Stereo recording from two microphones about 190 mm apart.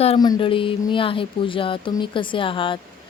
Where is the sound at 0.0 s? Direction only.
30° left (ahead or behind).